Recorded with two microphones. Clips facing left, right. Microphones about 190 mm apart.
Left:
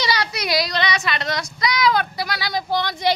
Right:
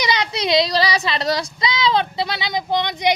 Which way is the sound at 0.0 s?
20° right (ahead or behind).